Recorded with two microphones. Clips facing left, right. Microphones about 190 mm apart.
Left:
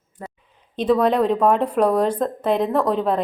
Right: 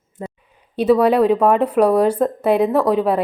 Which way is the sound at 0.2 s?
20° right (ahead or behind).